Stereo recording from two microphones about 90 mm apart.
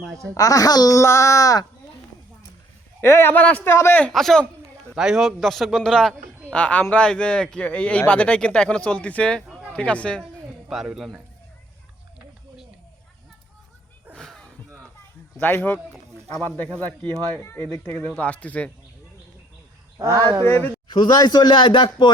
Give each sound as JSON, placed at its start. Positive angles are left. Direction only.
{"t": 0.3, "sound": "speech", "side_deg": 40}
{"t": 0.9, "sound": "speech", "side_deg": 35}
{"t": 3.0, "sound": "a man's voice", "side_deg": 25}
{"t": 3.7, "sound": "a man's voice", "side_deg": 30}
{"t": 4.1, "sound": "a man's voice", "side_deg": 5}
{"t": 10.7, "sound": "a man's voice", "side_deg": -5}
{"t": 14.2, "sound": "a sound", "side_deg": 5}
{"t": 15.4, "sound": "a man's voice", "side_deg": 20}
{"t": 17.0, "sound": "a man's voice", "side_deg": 15}
{"t": 20.0, "sound": "speech", "side_deg": -35}
{"t": 20.4, "sound": "a man's voice", "side_deg": 25}
{"t": 20.8, "sound": "speech", "side_deg": 55}